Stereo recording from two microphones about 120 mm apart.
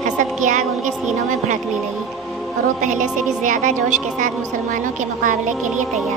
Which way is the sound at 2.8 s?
90° right.